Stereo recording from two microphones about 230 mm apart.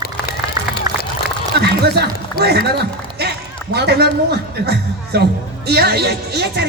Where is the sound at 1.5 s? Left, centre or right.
Right.